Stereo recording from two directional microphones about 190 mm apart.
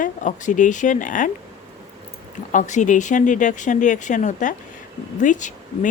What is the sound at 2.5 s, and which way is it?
Speech, 40° left (ahead or behind).